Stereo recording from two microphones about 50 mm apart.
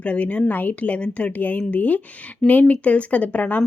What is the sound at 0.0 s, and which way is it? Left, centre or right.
Speech, left.